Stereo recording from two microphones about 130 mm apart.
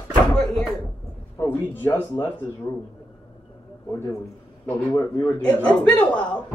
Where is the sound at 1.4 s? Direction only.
15° left (ahead or behind).